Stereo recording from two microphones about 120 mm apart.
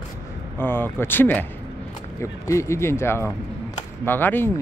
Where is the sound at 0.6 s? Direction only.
20° left (ahead or behind).